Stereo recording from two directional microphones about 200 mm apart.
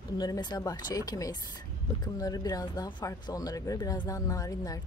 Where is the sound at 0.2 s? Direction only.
20° left (ahead or behind).